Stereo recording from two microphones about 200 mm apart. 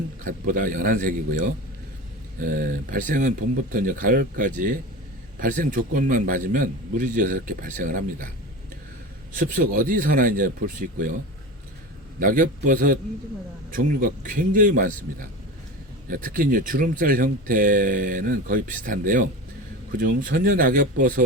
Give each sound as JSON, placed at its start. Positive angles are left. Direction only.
{"t": 0.3, "sound": "speech", "side_deg": -40}
{"t": 9.3, "sound": "speech", "side_deg": -40}
{"t": 12.2, "sound": "speech", "side_deg": -40}
{"t": 16.0, "sound": "speech", "side_deg": -45}